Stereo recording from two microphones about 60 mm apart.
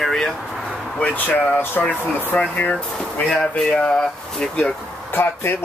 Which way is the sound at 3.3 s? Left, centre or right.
Centre.